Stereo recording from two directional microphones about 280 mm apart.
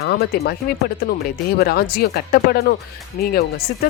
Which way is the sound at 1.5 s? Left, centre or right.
Left.